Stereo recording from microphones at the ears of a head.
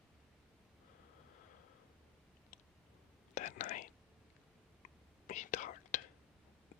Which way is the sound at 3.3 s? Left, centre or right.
Left.